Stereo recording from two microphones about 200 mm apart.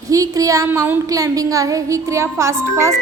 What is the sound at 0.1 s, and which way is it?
A woman's voice, 15° right (ahead or behind).